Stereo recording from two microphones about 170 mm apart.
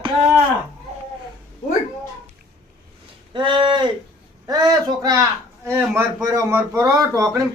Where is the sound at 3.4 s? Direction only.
30° right (ahead or behind).